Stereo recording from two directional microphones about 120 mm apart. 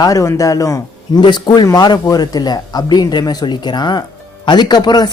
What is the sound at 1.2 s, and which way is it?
Speech, 40° left (ahead or behind).